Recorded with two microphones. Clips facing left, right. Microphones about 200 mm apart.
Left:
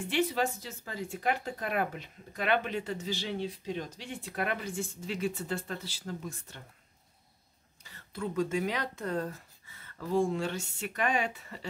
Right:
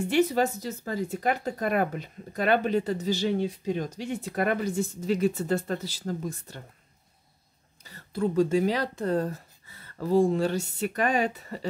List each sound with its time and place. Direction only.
0.1 s speech: 45° right (ahead or behind)
7.8 s speech: 35° right (ahead or behind)